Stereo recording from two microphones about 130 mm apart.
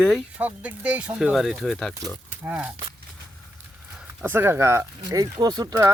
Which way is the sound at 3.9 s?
15° right (ahead or behind).